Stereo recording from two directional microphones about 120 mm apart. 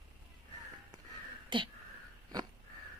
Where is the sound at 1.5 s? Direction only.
45° right (ahead or behind).